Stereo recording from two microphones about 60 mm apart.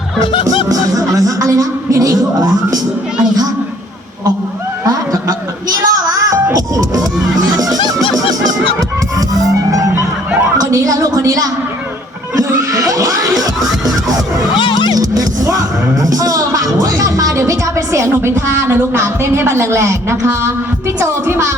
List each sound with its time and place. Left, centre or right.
0.4 s music: right
5.6 s music: right
7.0 s music: centre
7.3 s music: right
9.7 s music: right
10.3 s a sound: right
10.6 s a sound: right
12.7 s a sound: right
13.8 s music: right
18.1 s a woman's voice: right